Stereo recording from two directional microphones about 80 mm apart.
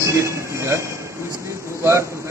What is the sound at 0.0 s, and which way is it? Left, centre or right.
Train, right.